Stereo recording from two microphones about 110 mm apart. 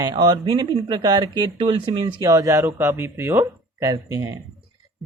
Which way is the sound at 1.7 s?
55° right (ahead or behind).